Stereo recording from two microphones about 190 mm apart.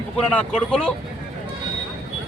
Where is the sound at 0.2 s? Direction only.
5° left (ahead or behind).